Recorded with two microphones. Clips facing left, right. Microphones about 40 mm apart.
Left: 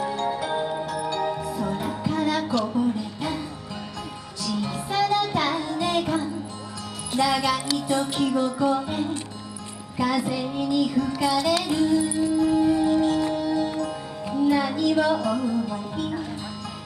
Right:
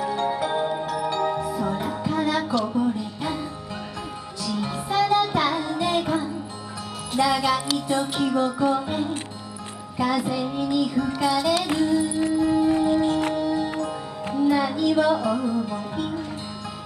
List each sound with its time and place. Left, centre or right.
0.2 s music: centre
4.5 s music: centre
12.4 s music: right
14.3 s speech: centre